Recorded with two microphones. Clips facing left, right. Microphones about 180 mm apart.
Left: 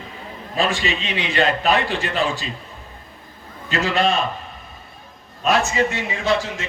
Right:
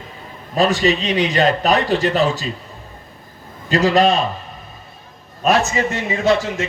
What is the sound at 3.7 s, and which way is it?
Speech, 35° right (ahead or behind).